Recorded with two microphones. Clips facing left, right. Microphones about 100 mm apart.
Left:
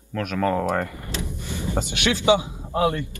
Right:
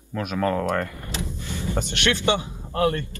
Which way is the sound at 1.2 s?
15° left (ahead or behind).